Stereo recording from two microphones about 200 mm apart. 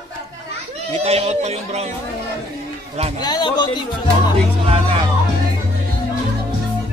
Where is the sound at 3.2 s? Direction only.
20° left (ahead or behind).